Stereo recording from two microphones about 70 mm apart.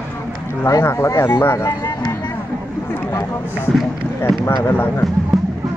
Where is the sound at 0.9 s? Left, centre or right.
Left.